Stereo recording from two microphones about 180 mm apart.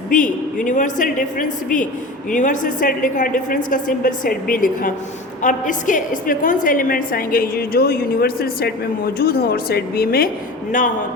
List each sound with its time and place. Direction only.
0.1 s a woman's voice: 45° left (ahead or behind)